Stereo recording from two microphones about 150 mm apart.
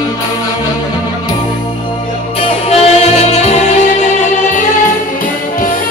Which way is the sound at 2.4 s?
45° left (ahead or behind).